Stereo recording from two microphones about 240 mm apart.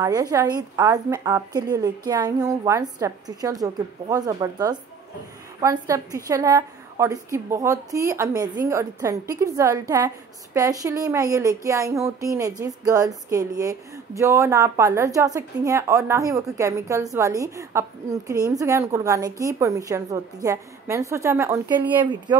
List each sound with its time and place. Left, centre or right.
0.0 s a woman's voice: centre